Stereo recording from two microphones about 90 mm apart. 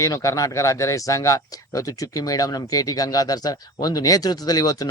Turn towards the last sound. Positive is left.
turn(degrees=45)  # may be behind; listen again after turning